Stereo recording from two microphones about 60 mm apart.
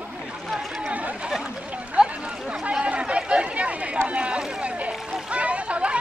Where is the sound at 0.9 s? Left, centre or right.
Right.